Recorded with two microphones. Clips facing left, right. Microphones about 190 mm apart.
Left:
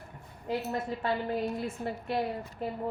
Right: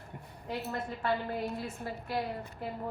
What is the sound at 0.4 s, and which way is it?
A woman's voice, 20° left (ahead or behind).